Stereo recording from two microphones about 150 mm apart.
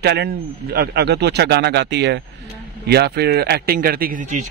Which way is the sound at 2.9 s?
90° right.